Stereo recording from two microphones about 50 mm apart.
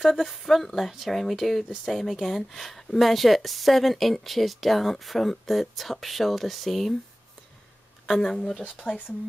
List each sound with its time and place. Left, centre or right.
0.0 s speech: centre
8.1 s speech: centre
8.8 s speech: left